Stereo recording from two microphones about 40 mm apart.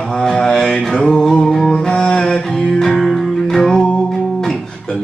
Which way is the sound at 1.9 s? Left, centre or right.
Left.